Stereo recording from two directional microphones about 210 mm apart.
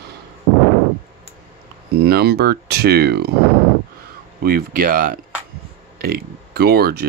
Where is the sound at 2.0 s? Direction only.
50° right (ahead or behind).